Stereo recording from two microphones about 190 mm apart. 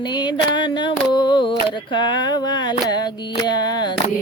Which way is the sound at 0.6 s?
25° left (ahead or behind).